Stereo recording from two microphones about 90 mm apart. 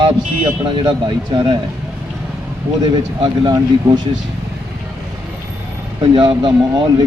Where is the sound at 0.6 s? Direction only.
65° right (ahead or behind).